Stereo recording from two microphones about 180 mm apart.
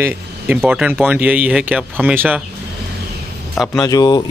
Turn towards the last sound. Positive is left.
turn(degrees=20)  # may be behind; listen again after turning